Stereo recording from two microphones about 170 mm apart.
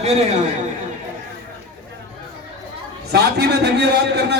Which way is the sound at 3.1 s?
75° right (ahead or behind).